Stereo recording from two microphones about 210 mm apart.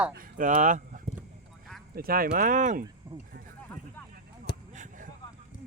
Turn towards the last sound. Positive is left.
turn(degrees=-35)  # may be behind; listen again after turning